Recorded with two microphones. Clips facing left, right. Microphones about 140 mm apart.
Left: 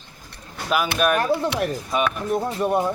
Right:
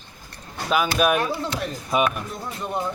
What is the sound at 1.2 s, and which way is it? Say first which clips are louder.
Speech: left 4 dB; 55° left (ahead or behind).